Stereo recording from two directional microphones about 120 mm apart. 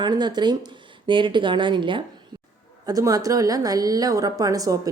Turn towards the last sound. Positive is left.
turn(degrees=-30)  # may be behind; listen again after turning